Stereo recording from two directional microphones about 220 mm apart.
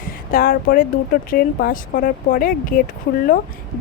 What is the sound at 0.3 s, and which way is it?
Speech, 40° left (ahead or behind).